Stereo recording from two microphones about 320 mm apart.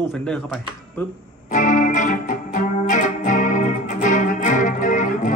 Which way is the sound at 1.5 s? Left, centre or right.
Left.